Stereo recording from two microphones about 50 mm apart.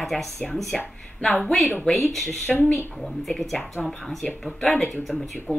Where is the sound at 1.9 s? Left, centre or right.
Centre.